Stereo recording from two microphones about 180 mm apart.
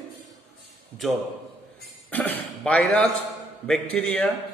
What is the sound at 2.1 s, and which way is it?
A man's voice, 10° left (ahead or behind).